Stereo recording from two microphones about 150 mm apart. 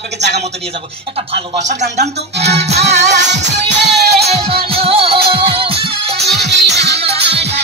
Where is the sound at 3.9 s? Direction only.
90° right.